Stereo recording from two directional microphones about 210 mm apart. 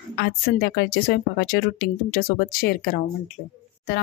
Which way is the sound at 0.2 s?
50° left (ahead or behind).